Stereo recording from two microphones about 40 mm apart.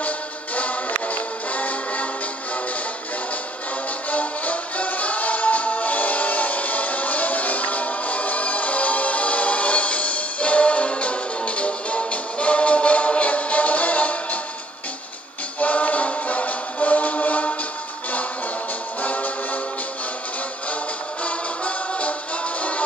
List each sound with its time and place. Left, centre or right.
0.6 s music: left
4.1 s music: left
15.6 s music: left
18.9 s music: left
21.2 s music: left